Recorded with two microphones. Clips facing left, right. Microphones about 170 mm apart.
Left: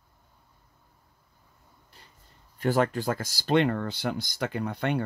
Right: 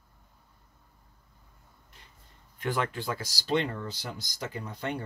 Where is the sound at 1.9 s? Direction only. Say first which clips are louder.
Left 2 dB; 35° left (ahead or behind).